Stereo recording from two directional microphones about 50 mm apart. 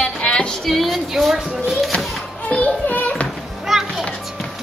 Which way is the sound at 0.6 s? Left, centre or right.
Centre.